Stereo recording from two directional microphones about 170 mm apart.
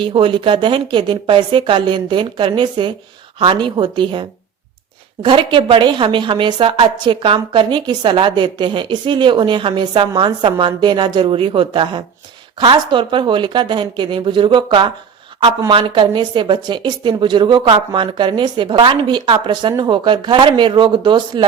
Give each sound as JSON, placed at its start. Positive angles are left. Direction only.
{"t": 0.0, "sound": "a woman's voice", "side_deg": -30}